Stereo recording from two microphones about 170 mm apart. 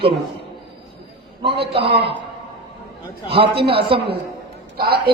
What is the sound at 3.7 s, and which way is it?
Speech, 35° right (ahead or behind).